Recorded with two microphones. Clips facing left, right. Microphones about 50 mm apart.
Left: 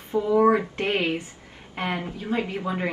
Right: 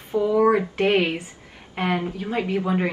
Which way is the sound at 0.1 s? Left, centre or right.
Left.